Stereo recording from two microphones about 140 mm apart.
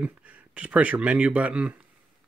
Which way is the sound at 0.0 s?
10° right (ahead or behind).